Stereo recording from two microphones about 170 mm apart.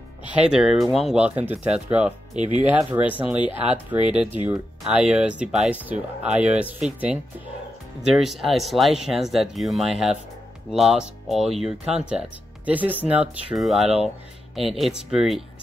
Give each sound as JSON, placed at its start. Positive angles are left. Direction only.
{"t": 0.3, "sound": "speech", "side_deg": -5}
{"t": 2.3, "sound": "speech", "side_deg": -40}
{"t": 2.7, "sound": "speech", "side_deg": -10}
{"t": 8.2, "sound": "speech", "side_deg": 0}